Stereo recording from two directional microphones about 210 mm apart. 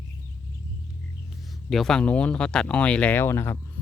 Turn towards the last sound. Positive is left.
turn(degrees=10)  # may be behind; listen again after turning